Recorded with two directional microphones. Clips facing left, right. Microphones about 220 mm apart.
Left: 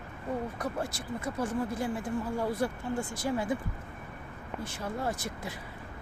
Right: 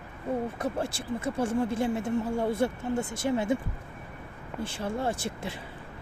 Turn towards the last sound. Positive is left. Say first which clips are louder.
# right 3 dB
turn(degrees=-30)  # may be behind; listen again after turning